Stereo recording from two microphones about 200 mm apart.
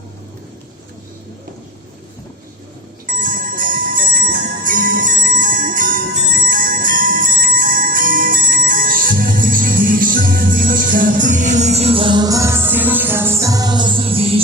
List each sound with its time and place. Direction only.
3.1 s music: 45° right (ahead or behind)